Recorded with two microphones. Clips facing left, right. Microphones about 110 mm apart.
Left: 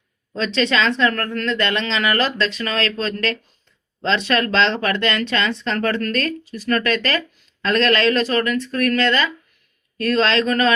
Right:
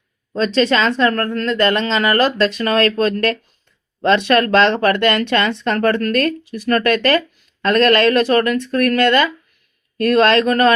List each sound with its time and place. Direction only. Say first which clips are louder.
0.3 s speech: right 4 dB; 40° right (ahead or behind)